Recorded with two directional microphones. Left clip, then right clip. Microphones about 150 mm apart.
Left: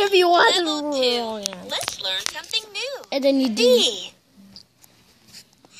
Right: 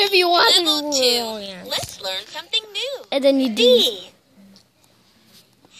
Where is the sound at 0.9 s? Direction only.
15° right (ahead or behind).